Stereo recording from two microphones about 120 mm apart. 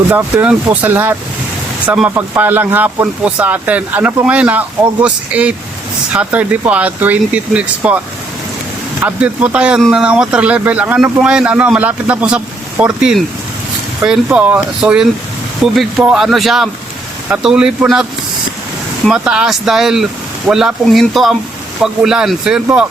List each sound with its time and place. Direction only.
0.1 s speech: 20° right (ahead or behind)
2.1 s speech: 20° right (ahead or behind)
9.0 s speech: 10° right (ahead or behind)
19.0 s speech: 5° right (ahead or behind)